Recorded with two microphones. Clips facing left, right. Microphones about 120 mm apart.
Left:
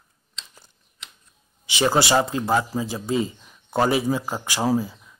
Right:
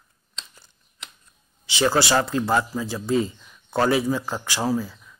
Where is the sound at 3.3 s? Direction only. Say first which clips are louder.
Left 1 dB; 25° left (ahead or behind).